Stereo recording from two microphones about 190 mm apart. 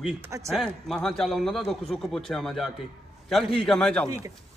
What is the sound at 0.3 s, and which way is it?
Speech, 15° right (ahead or behind).